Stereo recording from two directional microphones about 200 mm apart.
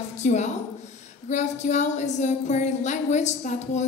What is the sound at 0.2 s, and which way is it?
A woman's voice, 35° left (ahead or behind).